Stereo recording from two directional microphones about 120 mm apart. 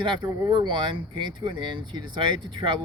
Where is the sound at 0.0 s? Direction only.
40° right (ahead or behind).